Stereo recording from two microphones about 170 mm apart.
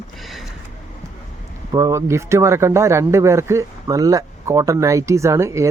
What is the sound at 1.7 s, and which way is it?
A man's voice, 20° right (ahead or behind).